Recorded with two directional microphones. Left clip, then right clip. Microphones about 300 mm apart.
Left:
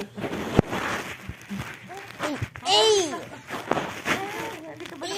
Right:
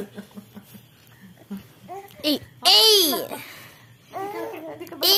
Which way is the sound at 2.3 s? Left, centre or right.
Right.